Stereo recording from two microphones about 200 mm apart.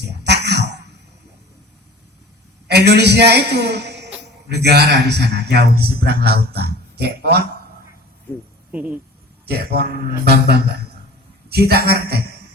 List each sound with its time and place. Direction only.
0.3 s a sound: 55° right (ahead or behind)
2.6 s a man's voice: 55° right (ahead or behind)
8.7 s speech: 10° right (ahead or behind)
9.5 s a man's voice: 50° right (ahead or behind)